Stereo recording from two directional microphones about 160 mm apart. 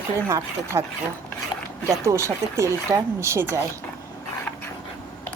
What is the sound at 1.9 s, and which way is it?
Speech, 20° right (ahead or behind).